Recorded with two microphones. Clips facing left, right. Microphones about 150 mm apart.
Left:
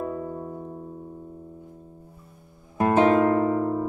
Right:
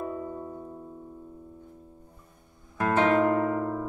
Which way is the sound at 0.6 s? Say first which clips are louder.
Left 4 dB; 30° left (ahead or behind).